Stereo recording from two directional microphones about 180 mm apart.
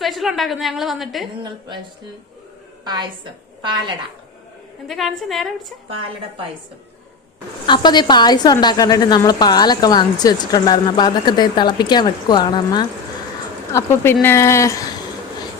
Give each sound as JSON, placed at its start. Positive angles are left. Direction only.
{"t": 0.0, "sound": "a woman's voice", "side_deg": 0}
{"t": 1.4, "sound": "a woman's voice", "side_deg": -25}
{"t": 2.8, "sound": "a woman's voice", "side_deg": -25}
{"t": 4.9, "sound": "a woman's voice", "side_deg": 0}
{"t": 7.7, "sound": "a woman's voice", "side_deg": 25}
{"t": 13.7, "sound": "speech", "side_deg": 15}